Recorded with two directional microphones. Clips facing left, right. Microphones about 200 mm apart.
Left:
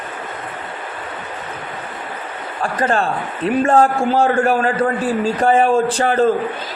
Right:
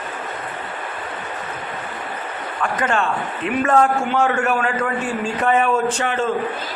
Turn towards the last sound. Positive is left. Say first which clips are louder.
# left 5 dB
turn(degrees=35)  # may be behind; listen again after turning